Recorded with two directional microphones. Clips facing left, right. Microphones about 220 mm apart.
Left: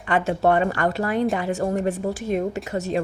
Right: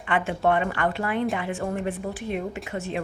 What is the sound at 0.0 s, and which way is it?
A woman's voice, 40° left (ahead or behind).